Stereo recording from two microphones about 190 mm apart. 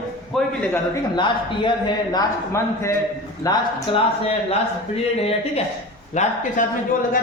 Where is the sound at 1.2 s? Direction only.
25° left (ahead or behind).